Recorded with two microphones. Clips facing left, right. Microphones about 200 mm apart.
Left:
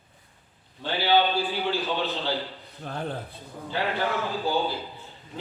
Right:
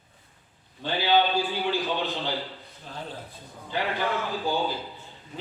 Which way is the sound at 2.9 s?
55° left (ahead or behind).